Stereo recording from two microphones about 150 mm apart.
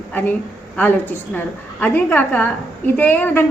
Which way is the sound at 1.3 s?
10° left (ahead or behind).